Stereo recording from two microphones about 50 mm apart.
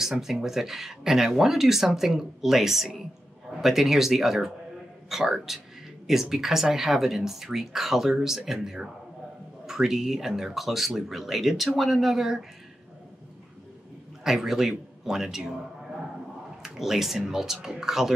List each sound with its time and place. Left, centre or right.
0.0 s speech: centre
14.2 s speech: centre
16.6 s speech: centre